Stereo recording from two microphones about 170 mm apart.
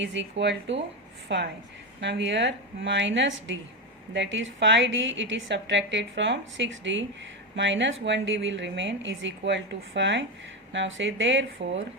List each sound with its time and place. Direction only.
0.0 s a woman's voice: 90° right